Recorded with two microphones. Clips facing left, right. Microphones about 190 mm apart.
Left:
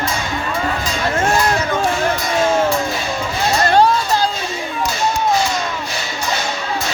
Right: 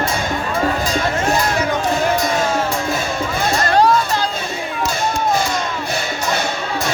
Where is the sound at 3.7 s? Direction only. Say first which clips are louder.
Even; 30° left (ahead or behind).